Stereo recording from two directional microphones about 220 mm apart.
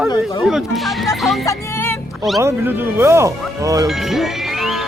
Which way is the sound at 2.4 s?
10° right (ahead or behind).